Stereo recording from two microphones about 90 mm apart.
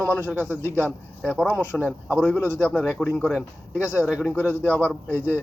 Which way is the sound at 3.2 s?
5° right (ahead or behind).